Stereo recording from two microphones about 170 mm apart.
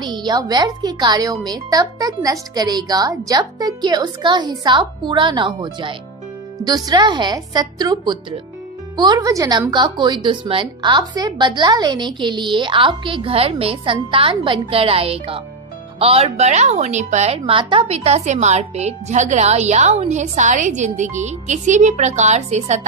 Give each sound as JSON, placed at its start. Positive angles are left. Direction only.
{"t": 0.0, "sound": "a woman's voice", "side_deg": -25}